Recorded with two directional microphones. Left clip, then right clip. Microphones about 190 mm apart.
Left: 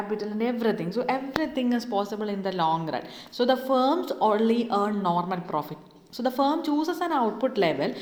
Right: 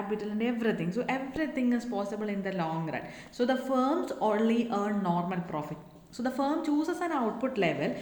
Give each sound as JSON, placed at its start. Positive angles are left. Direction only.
{"t": 0.2, "sound": "a woman's voice", "side_deg": 20}